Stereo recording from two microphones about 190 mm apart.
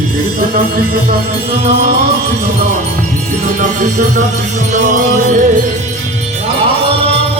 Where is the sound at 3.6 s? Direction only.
40° right (ahead or behind).